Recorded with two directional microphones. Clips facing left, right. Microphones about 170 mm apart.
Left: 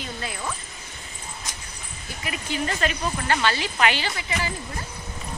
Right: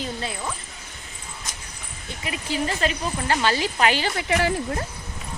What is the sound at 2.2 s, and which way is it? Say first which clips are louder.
Speech: right 2 dB; 30° right (ahead or behind).